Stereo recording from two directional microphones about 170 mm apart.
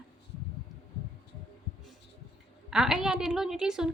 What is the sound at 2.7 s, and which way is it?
Speech, 5° right (ahead or behind).